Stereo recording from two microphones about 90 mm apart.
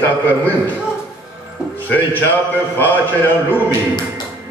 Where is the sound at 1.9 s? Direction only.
20° left (ahead or behind).